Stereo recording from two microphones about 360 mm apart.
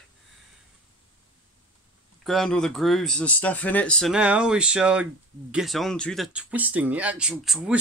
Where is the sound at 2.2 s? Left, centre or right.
Centre.